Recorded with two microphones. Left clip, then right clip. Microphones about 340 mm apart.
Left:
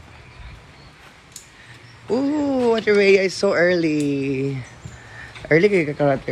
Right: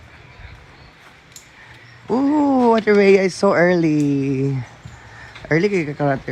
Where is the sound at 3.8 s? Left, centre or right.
Right.